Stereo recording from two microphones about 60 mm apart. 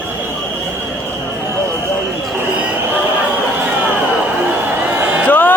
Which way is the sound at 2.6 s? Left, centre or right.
Right.